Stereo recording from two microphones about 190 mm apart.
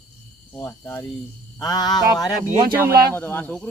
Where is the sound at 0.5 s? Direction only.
10° left (ahead or behind).